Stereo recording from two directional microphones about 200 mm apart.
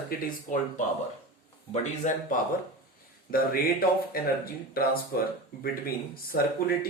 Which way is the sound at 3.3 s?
45° left (ahead or behind).